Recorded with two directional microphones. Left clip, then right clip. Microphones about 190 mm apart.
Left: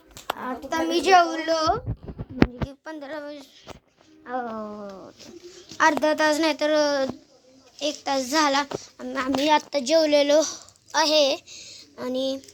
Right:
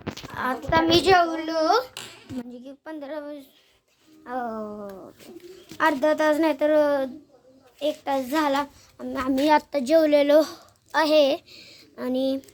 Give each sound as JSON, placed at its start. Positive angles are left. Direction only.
{"t": 0.3, "sound": "a child's voice", "side_deg": 0}
{"t": 1.1, "sound": "a child's voice", "side_deg": 10}
{"t": 4.3, "sound": "a child's voice", "side_deg": -5}
{"t": 7.8, "sound": "speech", "side_deg": 10}
{"t": 9.4, "sound": "a child's voice", "side_deg": -20}